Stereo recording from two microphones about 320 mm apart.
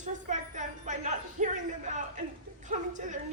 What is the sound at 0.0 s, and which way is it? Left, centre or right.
Music, right.